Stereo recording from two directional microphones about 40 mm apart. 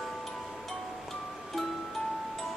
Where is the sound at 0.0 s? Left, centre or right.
Centre.